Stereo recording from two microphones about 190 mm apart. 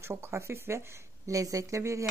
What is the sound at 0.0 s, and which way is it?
Speech, 15° right (ahead or behind).